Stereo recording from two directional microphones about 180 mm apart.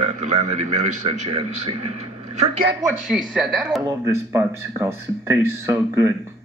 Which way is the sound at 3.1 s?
5° right (ahead or behind).